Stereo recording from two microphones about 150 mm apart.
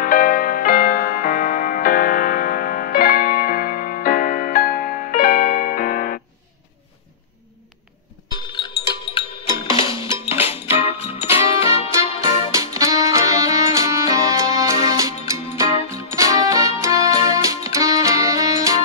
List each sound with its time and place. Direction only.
0.0 s music: 65° left (ahead or behind)
8.5 s music: 30° left (ahead or behind)
12.5 s music: 20° right (ahead or behind)